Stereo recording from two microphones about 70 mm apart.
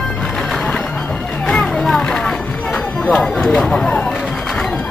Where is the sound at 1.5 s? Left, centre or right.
Centre.